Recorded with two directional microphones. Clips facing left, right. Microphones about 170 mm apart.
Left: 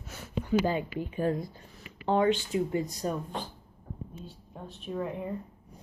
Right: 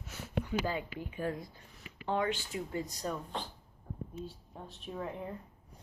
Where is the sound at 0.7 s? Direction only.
25° left (ahead or behind).